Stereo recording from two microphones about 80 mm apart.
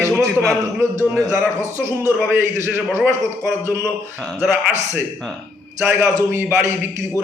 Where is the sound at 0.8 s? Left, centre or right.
Right.